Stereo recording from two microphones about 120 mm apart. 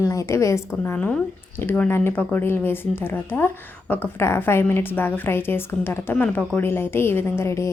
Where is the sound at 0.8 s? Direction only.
15° left (ahead or behind).